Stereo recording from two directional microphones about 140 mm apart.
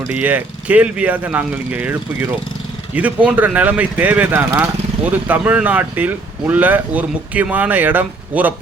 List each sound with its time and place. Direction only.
0.1 s speech: 10° right (ahead or behind)